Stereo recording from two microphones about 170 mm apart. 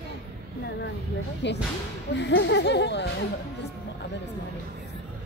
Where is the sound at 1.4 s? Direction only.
90° left.